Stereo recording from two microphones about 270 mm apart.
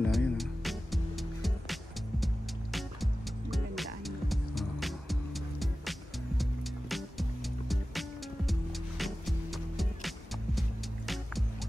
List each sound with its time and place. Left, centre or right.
0.0 s music: centre